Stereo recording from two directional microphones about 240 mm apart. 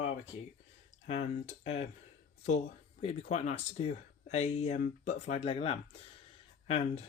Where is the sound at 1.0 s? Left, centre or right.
Left.